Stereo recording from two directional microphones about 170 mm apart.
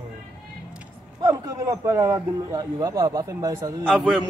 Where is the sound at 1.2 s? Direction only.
20° right (ahead or behind).